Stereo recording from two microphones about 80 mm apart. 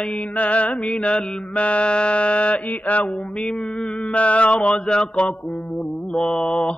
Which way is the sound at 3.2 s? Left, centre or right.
Centre.